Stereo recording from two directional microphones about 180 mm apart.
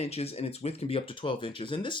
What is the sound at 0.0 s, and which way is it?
Speech, 35° left (ahead or behind).